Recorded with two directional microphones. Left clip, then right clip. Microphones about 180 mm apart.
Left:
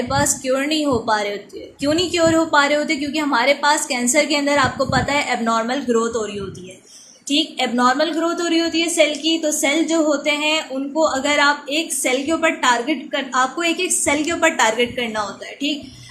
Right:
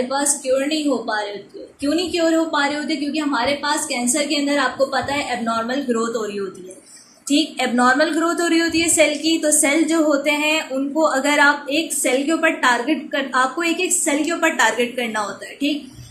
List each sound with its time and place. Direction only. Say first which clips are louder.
0.1 s a woman's voice: left 1 dB; 35° left (ahead or behind); by 15.2 s 15° left (ahead or behind)